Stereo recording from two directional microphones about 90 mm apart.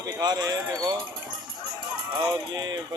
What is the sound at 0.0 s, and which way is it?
Speech, 50° right (ahead or behind).